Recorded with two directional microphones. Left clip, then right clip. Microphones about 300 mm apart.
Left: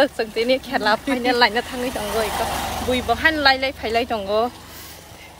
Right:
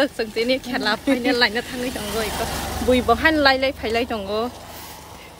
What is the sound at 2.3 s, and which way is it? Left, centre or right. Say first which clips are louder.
Speech: left 3 dB; centre.